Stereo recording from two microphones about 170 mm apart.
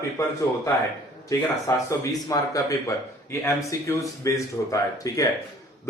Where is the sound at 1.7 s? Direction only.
20° left (ahead or behind).